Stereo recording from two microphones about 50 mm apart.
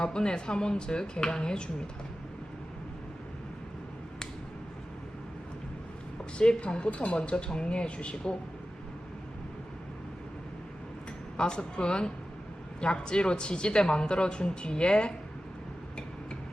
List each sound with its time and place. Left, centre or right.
0.0 s speech: centre
6.4 s speech: centre
11.3 s speech: centre